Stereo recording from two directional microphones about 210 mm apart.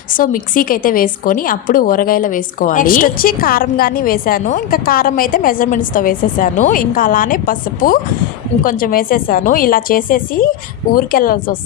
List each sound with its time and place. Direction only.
0.2 s a woman's voice: 40° left (ahead or behind)